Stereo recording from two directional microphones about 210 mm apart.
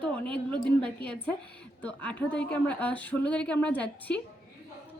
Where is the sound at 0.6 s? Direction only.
25° right (ahead or behind).